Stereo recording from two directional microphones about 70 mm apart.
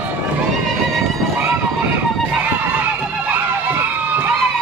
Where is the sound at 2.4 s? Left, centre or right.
Right.